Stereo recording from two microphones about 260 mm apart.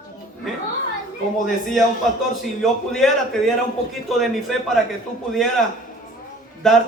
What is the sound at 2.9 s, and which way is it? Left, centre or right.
Speech, centre.